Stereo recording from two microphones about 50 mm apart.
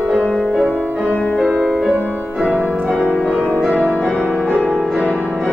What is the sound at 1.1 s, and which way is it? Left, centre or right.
Music, left.